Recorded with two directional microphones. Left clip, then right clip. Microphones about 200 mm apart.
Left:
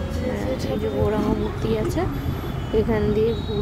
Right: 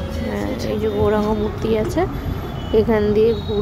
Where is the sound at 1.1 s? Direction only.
15° right (ahead or behind).